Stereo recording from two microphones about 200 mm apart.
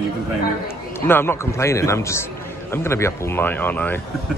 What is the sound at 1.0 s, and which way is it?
Speech, 10° left (ahead or behind).